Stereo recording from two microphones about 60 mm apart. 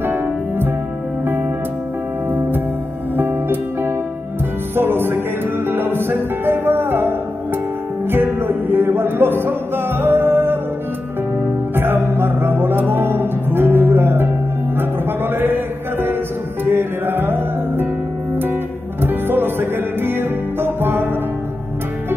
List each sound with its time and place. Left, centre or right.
0.0 s music: right
3.2 s music: right
11.7 s music: right